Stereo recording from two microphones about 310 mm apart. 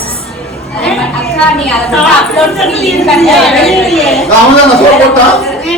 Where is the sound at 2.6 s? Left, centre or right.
Centre.